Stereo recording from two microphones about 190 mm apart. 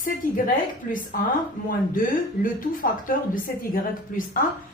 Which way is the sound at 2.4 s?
45° left (ahead or behind).